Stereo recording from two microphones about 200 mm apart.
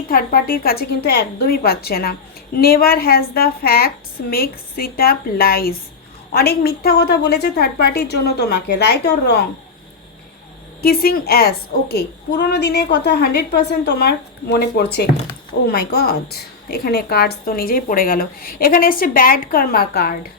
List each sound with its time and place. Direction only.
0.1 s a woman's voice: 45° left (ahead or behind)
10.8 s a woman's voice: 50° left (ahead or behind)